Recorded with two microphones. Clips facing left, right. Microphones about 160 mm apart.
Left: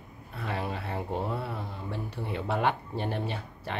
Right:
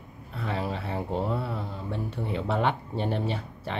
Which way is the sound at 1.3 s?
Centre (ahead or behind).